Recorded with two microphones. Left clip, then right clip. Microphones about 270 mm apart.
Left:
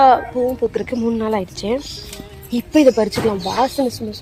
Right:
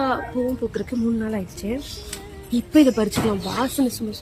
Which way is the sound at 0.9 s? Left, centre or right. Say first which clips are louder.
Left 6 dB; left.